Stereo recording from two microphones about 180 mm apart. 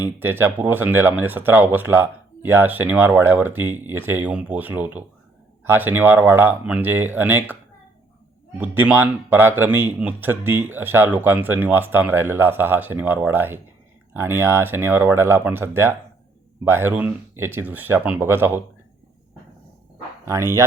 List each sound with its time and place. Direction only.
0.0 s speech: 10° right (ahead or behind)
8.5 s speech: 10° right (ahead or behind)
20.2 s speech: 15° right (ahead or behind)